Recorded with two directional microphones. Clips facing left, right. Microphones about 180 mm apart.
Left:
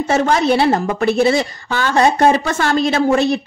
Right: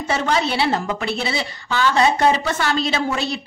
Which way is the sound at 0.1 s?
50° left (ahead or behind).